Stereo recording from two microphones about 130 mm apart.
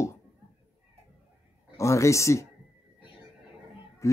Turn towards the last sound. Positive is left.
turn(degrees=25)  # may be behind; listen again after turning